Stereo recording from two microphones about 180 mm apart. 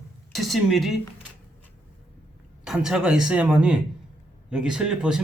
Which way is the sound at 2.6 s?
5° right (ahead or behind).